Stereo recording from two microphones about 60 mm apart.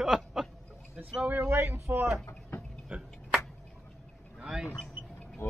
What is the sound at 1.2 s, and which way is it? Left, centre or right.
Speech, right.